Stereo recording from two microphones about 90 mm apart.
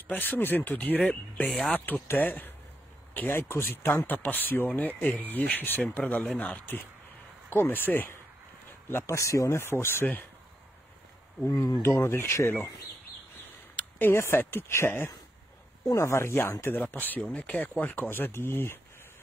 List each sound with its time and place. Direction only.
0.1 s speech: 20° left (ahead or behind)
8.9 s speech: 35° left (ahead or behind)
11.5 s speech: 40° left (ahead or behind)
11.8 s speech: 25° left (ahead or behind)
13.7 s speech: 25° left (ahead or behind)